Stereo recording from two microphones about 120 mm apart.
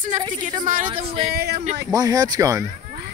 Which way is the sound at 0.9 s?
50° right (ahead or behind).